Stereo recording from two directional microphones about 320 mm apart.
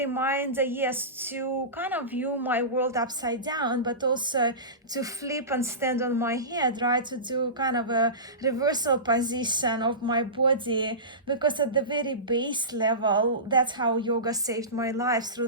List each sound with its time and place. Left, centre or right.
0.0 s a woman's voice: centre